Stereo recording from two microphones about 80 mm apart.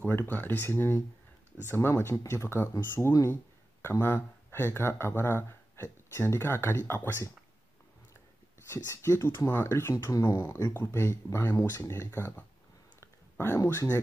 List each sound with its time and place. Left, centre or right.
0.0 s speech: left
8.6 s speech: left
13.0 s a sound: left